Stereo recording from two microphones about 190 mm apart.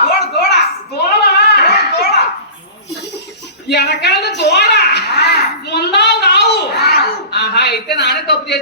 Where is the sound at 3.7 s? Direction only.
60° left (ahead or behind).